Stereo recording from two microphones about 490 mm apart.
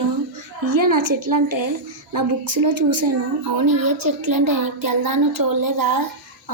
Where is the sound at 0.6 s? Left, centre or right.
Right.